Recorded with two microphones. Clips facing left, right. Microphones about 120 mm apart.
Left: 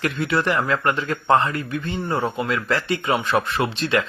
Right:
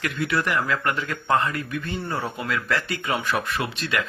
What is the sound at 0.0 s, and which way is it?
Speech, 30° left (ahead or behind).